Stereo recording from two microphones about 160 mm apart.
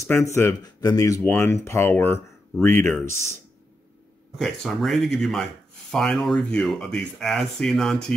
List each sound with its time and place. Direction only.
0.0 s speech: 15° left (ahead or behind)
4.4 s speech: centre (ahead or behind)